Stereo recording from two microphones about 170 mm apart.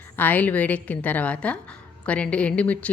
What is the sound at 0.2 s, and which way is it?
Speech, 10° left (ahead or behind).